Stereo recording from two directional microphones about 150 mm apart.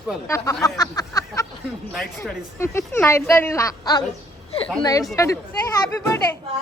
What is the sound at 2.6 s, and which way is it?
A woman's voice, 15° left (ahead or behind).